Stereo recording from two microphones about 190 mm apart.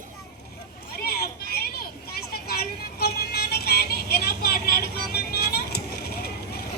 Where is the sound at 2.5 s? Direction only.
55° left (ahead or behind).